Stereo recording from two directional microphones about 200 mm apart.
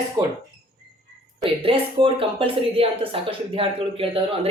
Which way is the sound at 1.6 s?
25° right (ahead or behind).